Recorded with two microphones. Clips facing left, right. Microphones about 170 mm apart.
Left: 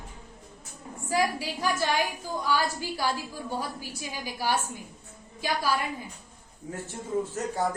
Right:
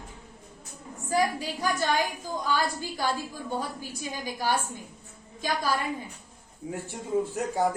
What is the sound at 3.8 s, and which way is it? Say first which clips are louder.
Speech: right 2 dB; 10° left (ahead or behind).